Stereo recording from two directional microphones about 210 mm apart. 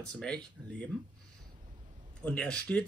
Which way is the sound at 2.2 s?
5° left (ahead or behind).